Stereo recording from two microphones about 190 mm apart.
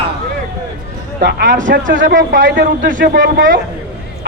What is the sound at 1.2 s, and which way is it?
Speech, 45° right (ahead or behind).